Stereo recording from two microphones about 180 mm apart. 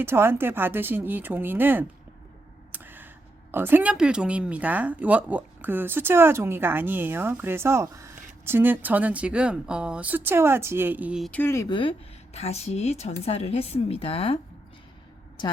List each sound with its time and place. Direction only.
0.0 s speech: 15° right (ahead or behind)
2.7 s a sound: 10° right (ahead or behind)
3.5 s speech: 10° right (ahead or behind)
11.3 s speech: 10° left (ahead or behind)
11.8 s speech: 30° left (ahead or behind)